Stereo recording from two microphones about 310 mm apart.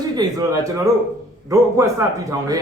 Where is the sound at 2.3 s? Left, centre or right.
Centre.